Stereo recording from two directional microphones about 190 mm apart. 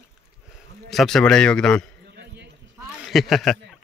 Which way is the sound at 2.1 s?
60° right (ahead or behind).